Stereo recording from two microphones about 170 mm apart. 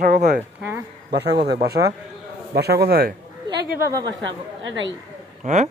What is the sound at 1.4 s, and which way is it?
A man's voice, 70° right (ahead or behind).